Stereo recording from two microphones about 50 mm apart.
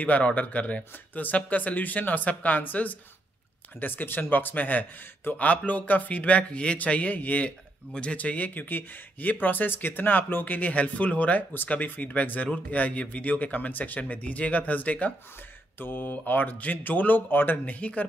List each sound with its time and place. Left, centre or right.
0.0 s speech: left
15.8 s speech: left
17.7 s speech: left